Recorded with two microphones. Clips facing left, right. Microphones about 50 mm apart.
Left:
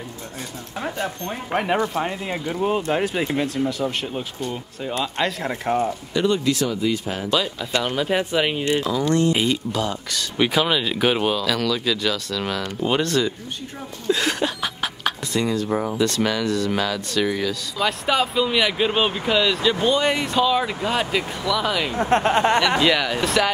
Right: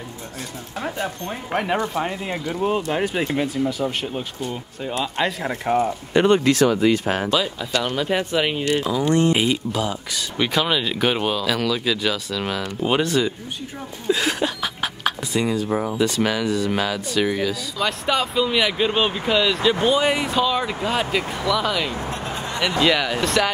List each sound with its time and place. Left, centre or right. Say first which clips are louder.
0.7 s speech: even; centre
6.1 s speech: right 5 dB; right
7.2 s speech: right 1 dB; centre
8.8 s speech: right 2 dB; centre
10.3 s speech: left 1 dB; centre
14.0 s a sound: even; centre
16.0 s speech: right 1 dB; centre
17.7 s speech: left 2 dB; centre
22.1 s speech: left 11 dB; left
22.8 s speech: even; centre